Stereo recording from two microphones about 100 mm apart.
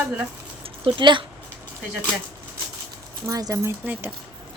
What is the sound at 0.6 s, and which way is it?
Speech, 60° right (ahead or behind).